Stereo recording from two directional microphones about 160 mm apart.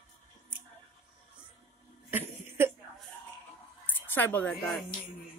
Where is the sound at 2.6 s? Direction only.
15° right (ahead or behind).